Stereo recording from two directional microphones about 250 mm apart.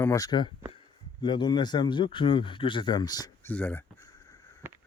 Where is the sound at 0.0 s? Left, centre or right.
Centre.